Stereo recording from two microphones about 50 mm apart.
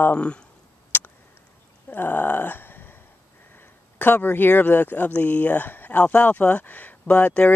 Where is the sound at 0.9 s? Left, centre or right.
Left.